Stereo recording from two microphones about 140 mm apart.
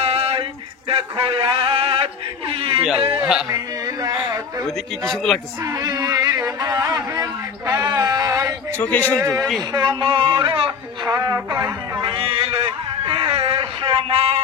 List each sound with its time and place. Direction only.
0.0 s a sound: 45° right (ahead or behind)
3.2 s a man's voice: 5° right (ahead or behind)
3.4 s a sound: 25° right (ahead or behind)
4.6 s a man's voice: centre (ahead or behind)
5.7 s speech: 25° right (ahead or behind)
8.7 s a man's voice: 10° left (ahead or behind)
9.7 s speech: 30° right (ahead or behind)
11.1 s music: 25° right (ahead or behind)
12.0 s a sound: 40° right (ahead or behind)